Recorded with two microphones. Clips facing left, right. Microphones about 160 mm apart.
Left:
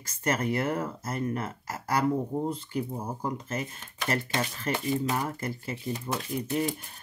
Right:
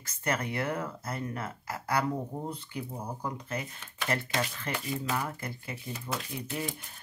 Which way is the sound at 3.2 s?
45° left (ahead or behind).